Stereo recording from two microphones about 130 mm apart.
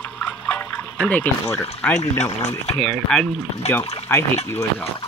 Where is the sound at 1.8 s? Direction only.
5° left (ahead or behind).